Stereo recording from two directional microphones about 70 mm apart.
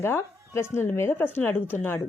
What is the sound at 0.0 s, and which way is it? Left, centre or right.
Speech, left.